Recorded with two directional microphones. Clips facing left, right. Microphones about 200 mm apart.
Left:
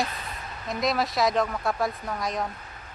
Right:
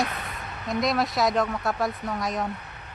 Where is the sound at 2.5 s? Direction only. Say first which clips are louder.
Right 7 dB; 65° right (ahead or behind).